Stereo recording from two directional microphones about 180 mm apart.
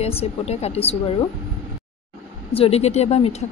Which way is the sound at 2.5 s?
35° left (ahead or behind).